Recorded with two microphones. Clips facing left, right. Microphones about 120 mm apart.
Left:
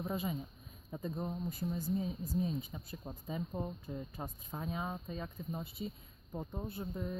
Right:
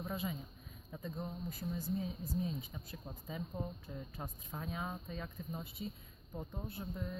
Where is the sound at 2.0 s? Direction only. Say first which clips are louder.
Left 3 dB; 25° left (ahead or behind).